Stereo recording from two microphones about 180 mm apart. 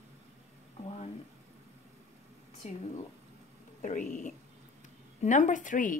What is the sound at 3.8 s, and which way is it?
A woman's voice, 45° left (ahead or behind).